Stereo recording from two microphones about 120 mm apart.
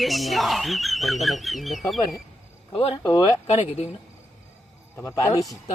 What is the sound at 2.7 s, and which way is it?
Speech, 45° left (ahead or behind).